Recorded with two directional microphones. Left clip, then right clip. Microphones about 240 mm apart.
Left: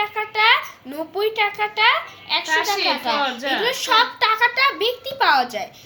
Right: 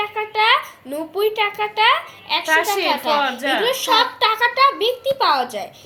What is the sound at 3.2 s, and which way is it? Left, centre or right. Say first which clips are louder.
Speech: right 2 dB; right.